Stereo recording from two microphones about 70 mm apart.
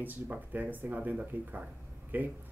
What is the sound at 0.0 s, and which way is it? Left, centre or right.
Speech, right.